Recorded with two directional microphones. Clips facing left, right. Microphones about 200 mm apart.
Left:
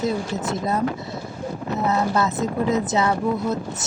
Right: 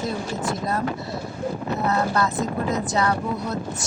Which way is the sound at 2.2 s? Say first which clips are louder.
Left 2 dB; 20° left (ahead or behind).